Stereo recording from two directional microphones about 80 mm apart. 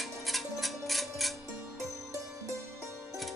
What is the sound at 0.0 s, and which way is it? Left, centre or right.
Tick-tock, centre.